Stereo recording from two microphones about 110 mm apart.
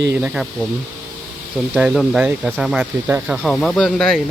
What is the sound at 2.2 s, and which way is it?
Speech, 10° right (ahead or behind).